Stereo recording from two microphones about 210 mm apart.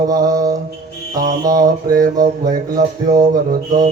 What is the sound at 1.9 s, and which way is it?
Speech, 40° right (ahead or behind).